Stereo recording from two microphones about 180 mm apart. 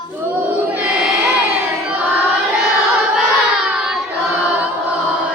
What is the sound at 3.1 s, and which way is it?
Child singing, 5° right (ahead or behind).